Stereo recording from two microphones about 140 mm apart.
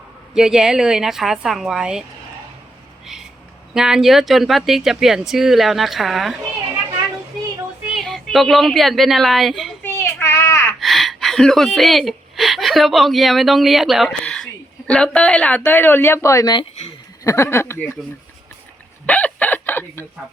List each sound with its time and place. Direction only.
0.3 s speech: 5° right (ahead or behind)
3.8 s speech: 5° right (ahead or behind)
7.9 s speech: centre (ahead or behind)
9.8 s child singing: 15° left (ahead or behind)
10.8 s speech: centre (ahead or behind); by 17.9 s 20° left (ahead or behind)
19.0 s chicken: 10° left (ahead or behind)